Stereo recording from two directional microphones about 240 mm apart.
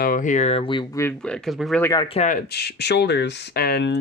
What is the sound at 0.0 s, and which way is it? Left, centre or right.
Speech, left.